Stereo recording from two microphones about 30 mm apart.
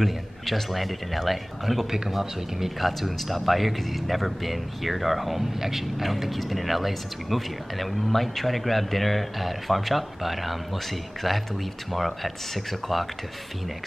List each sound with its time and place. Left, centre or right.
0.0 s speech: centre
1.9 s speech: centre